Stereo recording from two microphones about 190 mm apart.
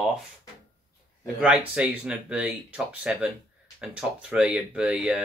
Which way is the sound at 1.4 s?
5° right (ahead or behind).